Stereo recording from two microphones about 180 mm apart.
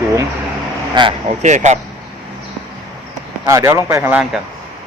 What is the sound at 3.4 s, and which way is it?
Speech, 15° right (ahead or behind).